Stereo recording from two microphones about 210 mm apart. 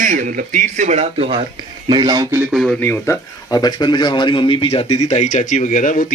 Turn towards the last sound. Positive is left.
turn(degrees=35)  # may be behind; listen again after turning